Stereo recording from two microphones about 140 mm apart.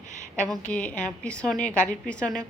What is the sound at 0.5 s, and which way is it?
A woman's voice, 10° left (ahead or behind).